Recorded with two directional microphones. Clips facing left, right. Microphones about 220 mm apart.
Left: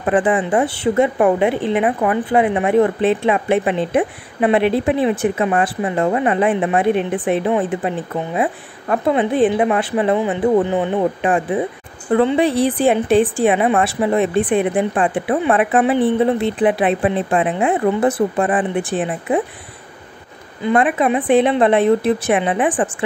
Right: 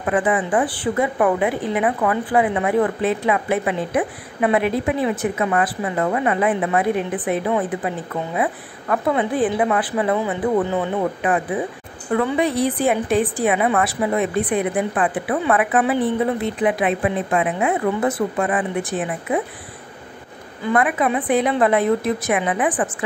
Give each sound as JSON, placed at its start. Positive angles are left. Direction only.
{"t": 0.0, "sound": "a woman's voice", "side_deg": 30}
{"t": 20.6, "sound": "a woman's voice", "side_deg": 25}